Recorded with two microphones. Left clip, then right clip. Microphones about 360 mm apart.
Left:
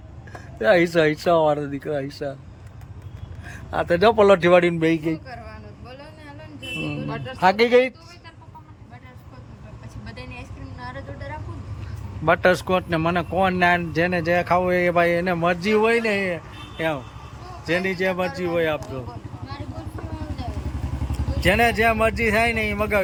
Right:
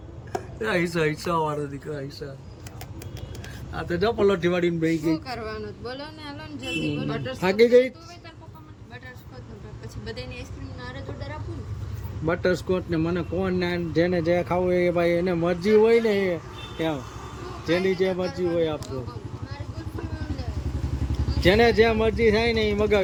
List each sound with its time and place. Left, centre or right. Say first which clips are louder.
0.6 s speech: left 8 dB; centre
3.8 s speech: left 7 dB; centre
5.1 s a sound: right 4 dB; centre
7.1 s speech: left 9 dB; centre
10.1 s a sound: right 2 dB; centre
12.2 s speech: left 6 dB; centre
21.4 s speech: even; centre